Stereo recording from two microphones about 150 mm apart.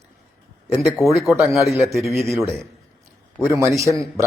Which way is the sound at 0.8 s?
Centre (ahead or behind).